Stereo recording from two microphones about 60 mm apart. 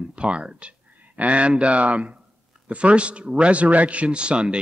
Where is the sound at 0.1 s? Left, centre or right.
Centre.